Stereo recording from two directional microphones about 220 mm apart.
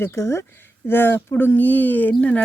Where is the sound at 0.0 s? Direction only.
10° left (ahead or behind).